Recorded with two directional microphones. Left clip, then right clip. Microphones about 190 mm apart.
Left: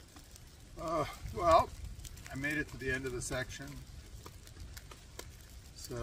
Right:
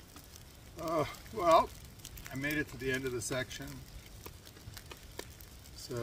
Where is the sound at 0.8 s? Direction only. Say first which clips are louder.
Right 2 dB; 5° right (ahead or behind).